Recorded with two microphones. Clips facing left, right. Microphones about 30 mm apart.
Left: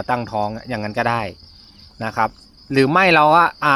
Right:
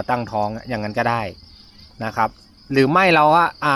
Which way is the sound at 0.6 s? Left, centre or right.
Centre.